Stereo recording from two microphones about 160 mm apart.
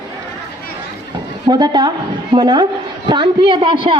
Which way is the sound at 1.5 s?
25° right (ahead or behind).